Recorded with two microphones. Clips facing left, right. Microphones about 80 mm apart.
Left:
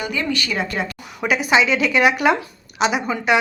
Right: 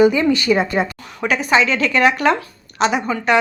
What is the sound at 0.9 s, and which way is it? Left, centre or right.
A woman's voice, centre.